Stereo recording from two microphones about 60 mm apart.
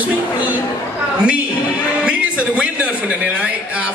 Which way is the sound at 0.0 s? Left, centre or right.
Right.